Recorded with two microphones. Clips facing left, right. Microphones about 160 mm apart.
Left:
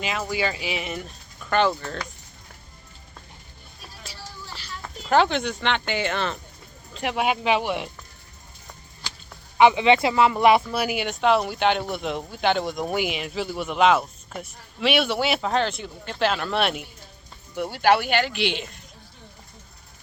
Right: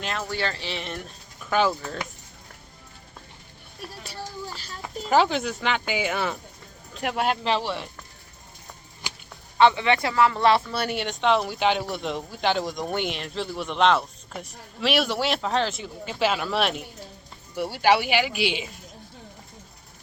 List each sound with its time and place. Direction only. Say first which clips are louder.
0.0 s speech: left 3 dB; 5° left (ahead or behind)
3.8 s music: right 5 dB; 60° right (ahead or behind)
5.0 s speech: left 1 dB; 5° right (ahead or behind); by 7.9 s 15° left (ahead or behind)
9.0 s honk: right 1 dB; 15° right (ahead or behind)
9.6 s speech: left 3 dB; 15° left (ahead or behind); by 18.8 s 5° right (ahead or behind)